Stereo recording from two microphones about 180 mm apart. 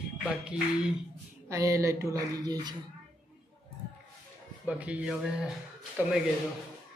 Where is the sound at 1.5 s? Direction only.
15° right (ahead or behind).